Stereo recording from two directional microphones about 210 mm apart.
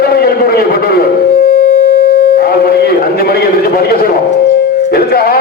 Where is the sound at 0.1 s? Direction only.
45° left (ahead or behind).